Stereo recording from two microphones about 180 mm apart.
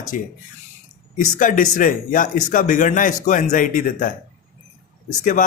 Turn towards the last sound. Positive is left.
turn(degrees=45)  # may be behind; listen again after turning